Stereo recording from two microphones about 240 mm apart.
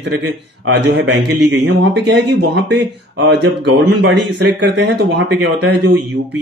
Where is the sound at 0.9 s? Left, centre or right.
Right.